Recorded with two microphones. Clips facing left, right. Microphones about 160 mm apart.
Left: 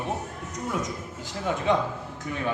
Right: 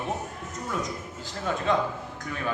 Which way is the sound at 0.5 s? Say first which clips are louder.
Left 2 dB; 20° left (ahead or behind).